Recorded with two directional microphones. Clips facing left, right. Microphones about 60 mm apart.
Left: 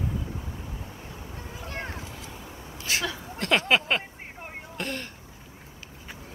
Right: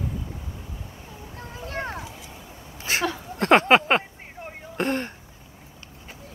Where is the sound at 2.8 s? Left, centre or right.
Right.